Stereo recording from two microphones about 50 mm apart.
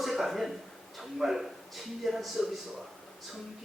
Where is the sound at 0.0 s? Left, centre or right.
Centre.